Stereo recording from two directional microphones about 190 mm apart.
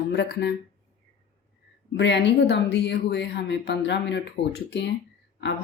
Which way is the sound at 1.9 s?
70° left (ahead or behind).